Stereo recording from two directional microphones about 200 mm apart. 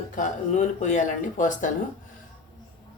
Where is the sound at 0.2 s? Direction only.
40° left (ahead or behind).